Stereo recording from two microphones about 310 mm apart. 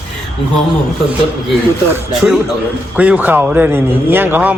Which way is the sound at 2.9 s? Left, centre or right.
Centre.